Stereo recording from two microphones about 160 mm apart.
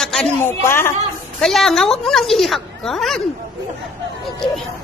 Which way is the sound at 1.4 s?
Centre (ahead or behind).